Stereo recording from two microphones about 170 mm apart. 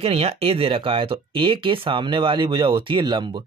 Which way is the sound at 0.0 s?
35° right (ahead or behind).